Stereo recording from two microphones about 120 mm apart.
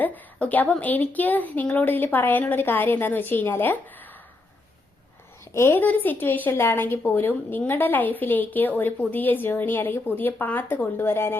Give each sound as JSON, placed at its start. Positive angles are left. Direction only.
{"t": 0.0, "sound": "a woman's voice", "side_deg": 15}
{"t": 5.5, "sound": "a woman's voice", "side_deg": 20}